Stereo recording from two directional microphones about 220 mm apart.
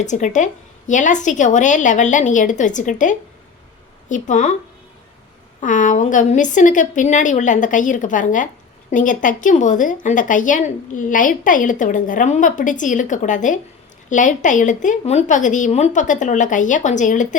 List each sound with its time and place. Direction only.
0.0 s a woman's voice: 35° left (ahead or behind)
5.5 s a woman's voice: 35° left (ahead or behind)